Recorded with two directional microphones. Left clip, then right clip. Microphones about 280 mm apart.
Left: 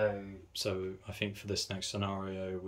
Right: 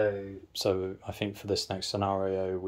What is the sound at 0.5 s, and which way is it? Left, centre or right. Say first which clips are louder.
Speech: right 7 dB; centre.